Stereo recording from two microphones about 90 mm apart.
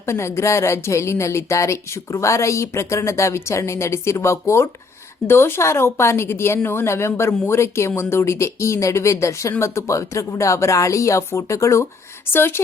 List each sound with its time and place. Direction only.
0.0 s a woman's voice: 30° left (ahead or behind)